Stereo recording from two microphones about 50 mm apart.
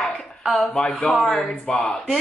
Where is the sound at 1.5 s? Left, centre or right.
Centre.